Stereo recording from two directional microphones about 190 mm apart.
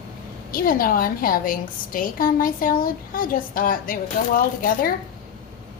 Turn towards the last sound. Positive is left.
turn(degrees=50)  # may be behind; listen again after turning